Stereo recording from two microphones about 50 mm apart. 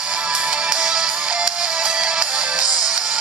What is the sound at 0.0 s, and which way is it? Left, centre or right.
Music, right.